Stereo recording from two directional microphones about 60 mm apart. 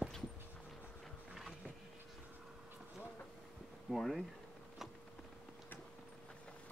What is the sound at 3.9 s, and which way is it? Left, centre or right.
Speech, centre.